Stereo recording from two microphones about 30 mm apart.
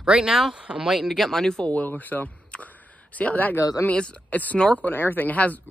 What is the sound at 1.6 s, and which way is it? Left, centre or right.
Speech, left.